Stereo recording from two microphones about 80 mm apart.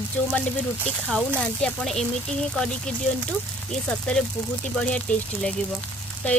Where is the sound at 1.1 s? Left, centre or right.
Centre.